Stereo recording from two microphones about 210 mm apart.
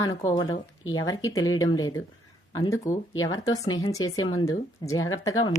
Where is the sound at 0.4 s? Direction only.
70° left (ahead or behind).